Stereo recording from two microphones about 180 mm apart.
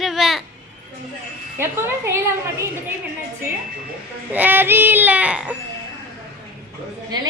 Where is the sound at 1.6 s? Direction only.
10° right (ahead or behind).